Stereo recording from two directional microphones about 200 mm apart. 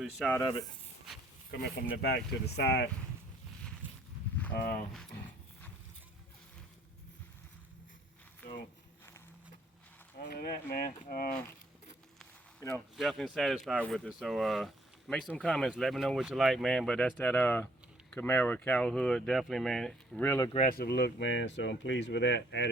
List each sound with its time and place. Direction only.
0.0 s speech: 5° left (ahead or behind)
2.0 s speech: 55° left (ahead or behind)
4.5 s speech: 50° left (ahead or behind)
10.2 s speech: 50° left (ahead or behind)
12.5 s speech: 10° left (ahead or behind)
13.0 s speech: centre (ahead or behind)
20.7 s speech: 50° left (ahead or behind)